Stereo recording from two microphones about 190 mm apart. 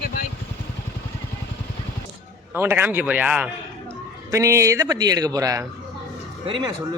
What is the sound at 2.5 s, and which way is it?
A man's voice, 10° right (ahead or behind).